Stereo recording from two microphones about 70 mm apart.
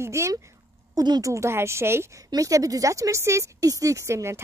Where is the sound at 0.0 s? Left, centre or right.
Right.